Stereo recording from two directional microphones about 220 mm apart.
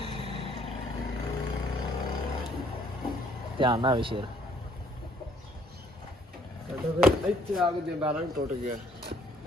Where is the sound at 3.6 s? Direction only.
20° right (ahead or behind).